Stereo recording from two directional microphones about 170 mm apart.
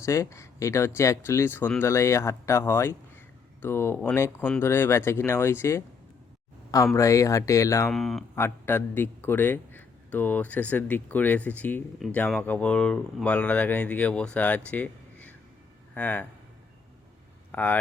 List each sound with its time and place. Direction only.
0.0 s a man's voice: 15° left (ahead or behind)
6.9 s a man's voice: 20° left (ahead or behind)
7.9 s speech: centre (ahead or behind)
8.4 s a man's voice: 15° left (ahead or behind)
17.5 s speech: 10° left (ahead or behind)